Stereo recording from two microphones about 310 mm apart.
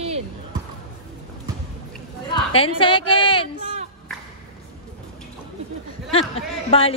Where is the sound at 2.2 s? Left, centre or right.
Centre.